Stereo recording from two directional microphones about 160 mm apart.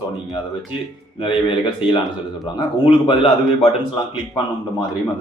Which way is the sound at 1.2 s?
30° left (ahead or behind).